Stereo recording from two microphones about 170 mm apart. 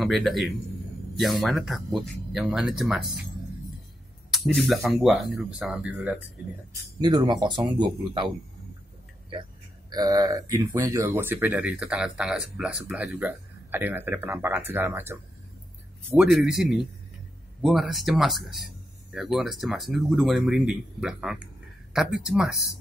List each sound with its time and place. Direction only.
0.0 s speech: centre (ahead or behind)
4.3 s speech: centre (ahead or behind)
7.0 s speech: 25° right (ahead or behind)
9.3 s speech: 25° right (ahead or behind); by 22.5 s centre (ahead or behind)